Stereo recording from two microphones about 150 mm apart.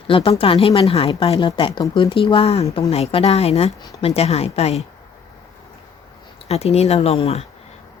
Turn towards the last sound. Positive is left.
turn(degrees=45)  # may be behind; listen again after turning